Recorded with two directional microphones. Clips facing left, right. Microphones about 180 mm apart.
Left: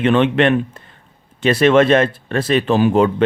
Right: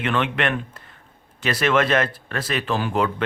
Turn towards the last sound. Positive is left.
turn(degrees=25)  # may be behind; listen again after turning